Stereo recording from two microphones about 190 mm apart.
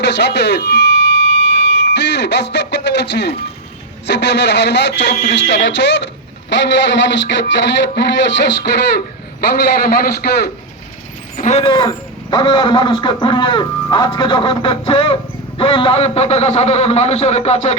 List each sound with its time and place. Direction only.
0.0 s a man's voice: 65° left (ahead or behind)
10.0 s a man's voice: 60° left (ahead or behind)
11.3 s a man's voice: 35° left (ahead or behind)